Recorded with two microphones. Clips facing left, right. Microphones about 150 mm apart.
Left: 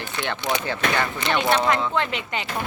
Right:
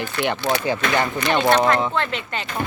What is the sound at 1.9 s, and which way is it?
Speech, 15° left (ahead or behind).